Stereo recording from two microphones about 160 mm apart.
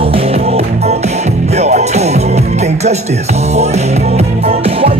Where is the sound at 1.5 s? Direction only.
45° right (ahead or behind).